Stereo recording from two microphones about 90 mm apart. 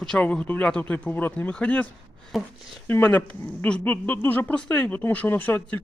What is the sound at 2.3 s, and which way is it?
Speech, centre (ahead or behind).